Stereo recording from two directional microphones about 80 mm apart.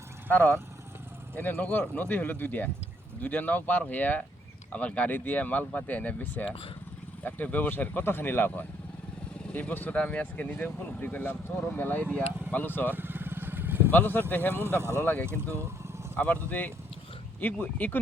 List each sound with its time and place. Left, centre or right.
0.3 s speech: centre
12.9 s motorcycle: right
13.9 s speech: left
14.8 s speech: right
15.0 s speech: centre
15.3 s speech: right
16.1 s speech: centre